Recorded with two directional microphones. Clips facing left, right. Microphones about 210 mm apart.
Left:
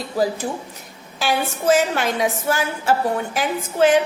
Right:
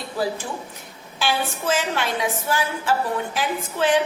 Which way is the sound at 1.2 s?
40° left (ahead or behind).